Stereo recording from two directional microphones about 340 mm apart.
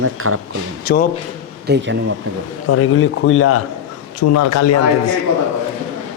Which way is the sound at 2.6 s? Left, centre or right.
Left.